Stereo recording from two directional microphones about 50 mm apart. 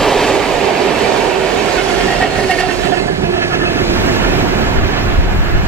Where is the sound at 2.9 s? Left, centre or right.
Right.